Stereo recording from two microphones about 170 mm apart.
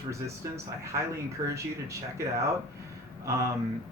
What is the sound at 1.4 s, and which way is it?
Speech, 15° right (ahead or behind).